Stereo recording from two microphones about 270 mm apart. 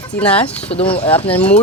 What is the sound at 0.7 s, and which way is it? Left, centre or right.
Speech, left.